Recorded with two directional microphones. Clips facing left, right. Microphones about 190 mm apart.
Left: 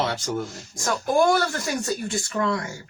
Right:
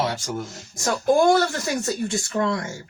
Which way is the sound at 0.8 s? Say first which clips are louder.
Right 3 dB; 25° right (ahead or behind).